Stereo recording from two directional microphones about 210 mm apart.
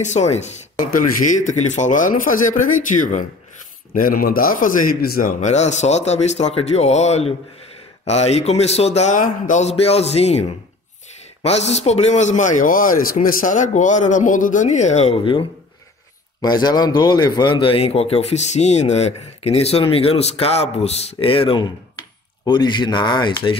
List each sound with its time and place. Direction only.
0.0 s a man's voice: 35° left (ahead or behind)
11.4 s a man's voice: 30° left (ahead or behind)